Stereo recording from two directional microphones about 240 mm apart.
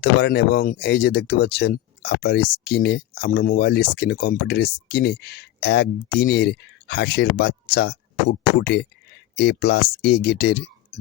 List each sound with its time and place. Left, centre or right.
0.0 s speech: left